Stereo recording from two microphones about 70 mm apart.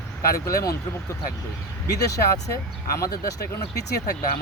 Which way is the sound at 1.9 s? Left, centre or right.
Left.